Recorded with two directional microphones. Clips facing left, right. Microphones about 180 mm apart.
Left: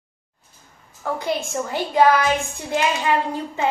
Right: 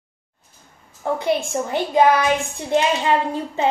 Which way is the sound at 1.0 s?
20° right (ahead or behind).